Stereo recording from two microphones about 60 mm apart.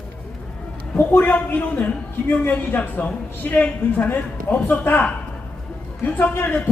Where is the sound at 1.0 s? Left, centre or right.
Left.